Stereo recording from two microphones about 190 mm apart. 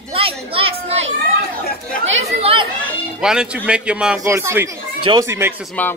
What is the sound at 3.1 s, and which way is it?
A man's voice, 5° right (ahead or behind).